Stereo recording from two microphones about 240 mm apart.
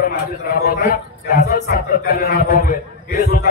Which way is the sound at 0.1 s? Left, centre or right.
Left.